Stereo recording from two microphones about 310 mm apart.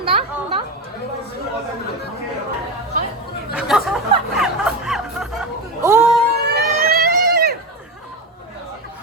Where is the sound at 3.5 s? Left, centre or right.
Centre.